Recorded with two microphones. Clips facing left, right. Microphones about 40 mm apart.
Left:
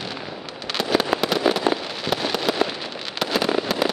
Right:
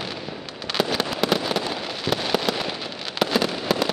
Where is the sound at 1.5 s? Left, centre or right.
Left.